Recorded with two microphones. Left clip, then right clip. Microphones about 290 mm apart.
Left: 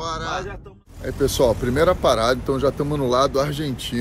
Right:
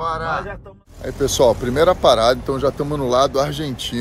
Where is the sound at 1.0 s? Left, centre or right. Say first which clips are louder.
Right 3 dB; centre.